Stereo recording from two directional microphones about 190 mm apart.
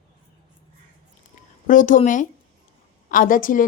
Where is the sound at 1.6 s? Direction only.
45° left (ahead or behind).